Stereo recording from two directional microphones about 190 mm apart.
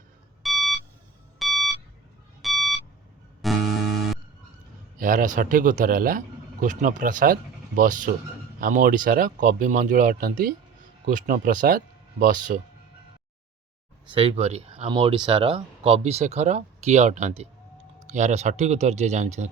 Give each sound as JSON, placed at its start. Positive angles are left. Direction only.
{"t": 0.4, "sound": "beep", "side_deg": 0}
{"t": 3.4, "sound": "music", "side_deg": 0}
{"t": 4.9, "sound": "speech", "side_deg": -45}
{"t": 14.1, "sound": "speech", "side_deg": -30}